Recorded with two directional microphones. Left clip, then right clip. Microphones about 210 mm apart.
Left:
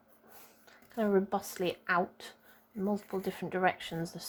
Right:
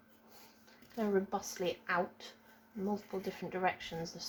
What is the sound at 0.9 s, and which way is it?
Speech, 45° left (ahead or behind).